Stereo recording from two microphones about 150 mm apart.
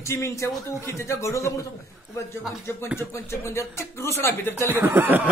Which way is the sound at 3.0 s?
15° left (ahead or behind).